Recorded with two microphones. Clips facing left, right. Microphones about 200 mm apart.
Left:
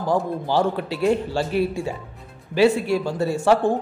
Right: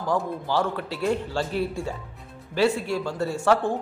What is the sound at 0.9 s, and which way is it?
Speech, 15° left (ahead or behind).